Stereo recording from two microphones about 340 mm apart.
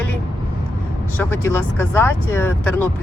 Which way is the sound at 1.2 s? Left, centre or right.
Centre.